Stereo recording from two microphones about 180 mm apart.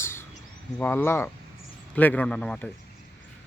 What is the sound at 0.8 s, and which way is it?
Speech, 10° left (ahead or behind).